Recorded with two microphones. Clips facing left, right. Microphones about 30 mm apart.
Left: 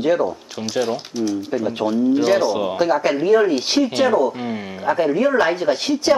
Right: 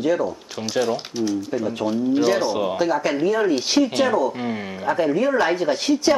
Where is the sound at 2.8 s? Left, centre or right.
Centre.